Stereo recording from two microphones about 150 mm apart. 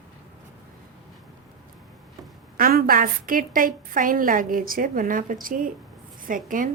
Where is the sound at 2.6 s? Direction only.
80° right; by 6.7 s 65° right (ahead or behind).